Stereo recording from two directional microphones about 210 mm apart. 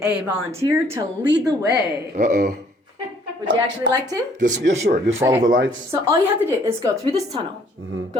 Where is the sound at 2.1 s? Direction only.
40° right (ahead or behind).